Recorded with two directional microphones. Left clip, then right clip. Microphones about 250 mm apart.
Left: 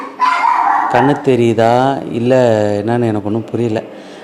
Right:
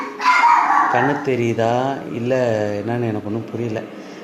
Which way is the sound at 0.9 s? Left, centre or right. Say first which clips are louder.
Left 6 dB; left.